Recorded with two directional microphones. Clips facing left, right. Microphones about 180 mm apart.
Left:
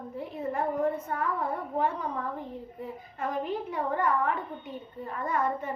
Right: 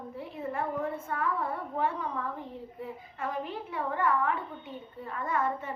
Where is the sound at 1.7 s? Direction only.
40° left (ahead or behind).